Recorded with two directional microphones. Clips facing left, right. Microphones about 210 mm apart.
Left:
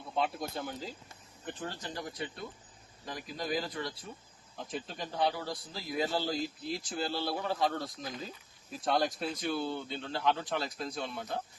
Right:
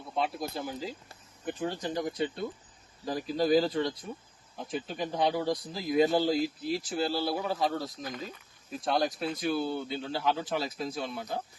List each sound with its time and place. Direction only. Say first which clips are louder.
0.2 s a man's voice: right 2 dB; centre (ahead or behind); by 2.4 s 25° right (ahead or behind)
3.1 s speech: right 10 dB; 35° right (ahead or behind)
4.7 s a man's voice: right 6 dB; 5° right (ahead or behind)
5.1 s a man's voice: right 4 dB; 20° right (ahead or behind); by 11.4 s 5° right (ahead or behind)